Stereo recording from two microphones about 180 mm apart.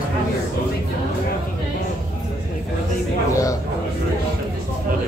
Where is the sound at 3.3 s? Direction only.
20° left (ahead or behind).